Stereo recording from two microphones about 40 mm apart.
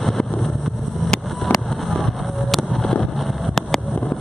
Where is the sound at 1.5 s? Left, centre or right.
Centre.